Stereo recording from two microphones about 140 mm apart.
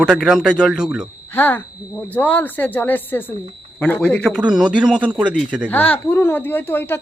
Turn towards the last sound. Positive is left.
turn(degrees=15)  # may be behind; listen again after turning